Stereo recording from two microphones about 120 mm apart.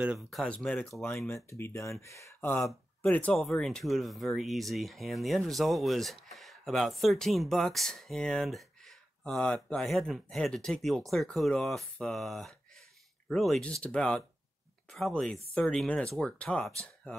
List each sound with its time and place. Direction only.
0.3 s speech: centre (ahead or behind); by 2.6 s 20° left (ahead or behind)
2.6 s speech: 10° left (ahead or behind)